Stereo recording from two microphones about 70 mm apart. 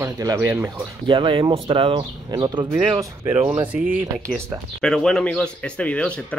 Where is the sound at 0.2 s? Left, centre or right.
Right.